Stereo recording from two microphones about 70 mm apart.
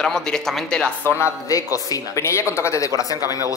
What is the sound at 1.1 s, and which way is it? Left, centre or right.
A man's voice, left.